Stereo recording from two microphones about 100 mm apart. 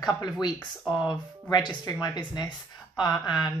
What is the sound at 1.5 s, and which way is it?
Speech, 45° left (ahead or behind).